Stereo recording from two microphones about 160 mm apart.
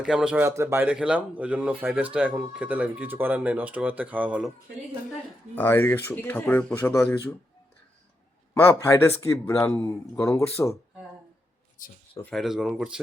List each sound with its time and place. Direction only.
0.0 s speech: 5° right (ahead or behind)
0.4 s speech: 15° right (ahead or behind)
5.5 s speech: 15° left (ahead or behind)
8.8 s speech: 15° left (ahead or behind)
12.3 s speech: centre (ahead or behind)